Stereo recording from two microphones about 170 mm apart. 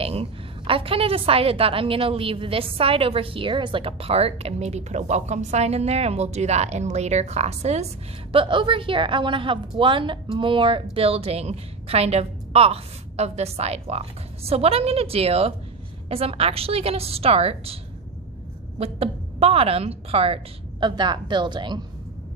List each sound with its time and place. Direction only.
0.0 s a woman's voice: 35° right (ahead or behind)
18.8 s a woman's voice: 35° right (ahead or behind)